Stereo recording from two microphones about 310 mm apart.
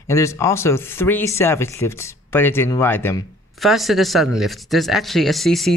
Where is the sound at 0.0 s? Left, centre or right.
Centre.